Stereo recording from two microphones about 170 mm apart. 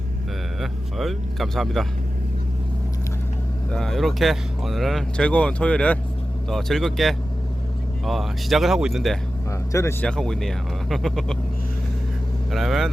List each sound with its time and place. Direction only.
0.6 s speech: centre (ahead or behind)
3.7 s speech: centre (ahead or behind)
9.5 s speech: 15° left (ahead or behind)
10.1 s speech: 5° left (ahead or behind)
12.5 s speech: centre (ahead or behind)